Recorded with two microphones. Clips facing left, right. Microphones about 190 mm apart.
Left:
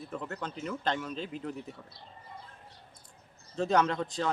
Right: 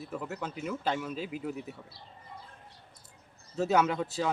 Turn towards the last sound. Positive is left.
turn(degrees=-5)  # may be behind; listen again after turning